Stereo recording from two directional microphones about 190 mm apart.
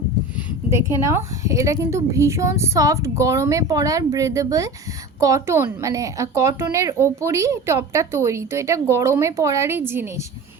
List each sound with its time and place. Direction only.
0.7 s speech: 15° right (ahead or behind)